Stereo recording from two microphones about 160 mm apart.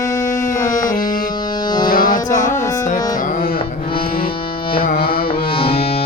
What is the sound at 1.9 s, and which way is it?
Music, 60° left (ahead or behind).